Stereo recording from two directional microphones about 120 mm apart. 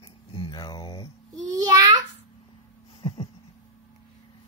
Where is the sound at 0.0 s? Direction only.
45° left (ahead or behind).